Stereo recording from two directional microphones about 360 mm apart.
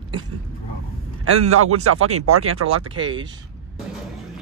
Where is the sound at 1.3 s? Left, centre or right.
Right.